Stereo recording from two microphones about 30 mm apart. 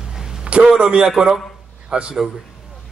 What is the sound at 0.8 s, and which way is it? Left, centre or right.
Speech, right.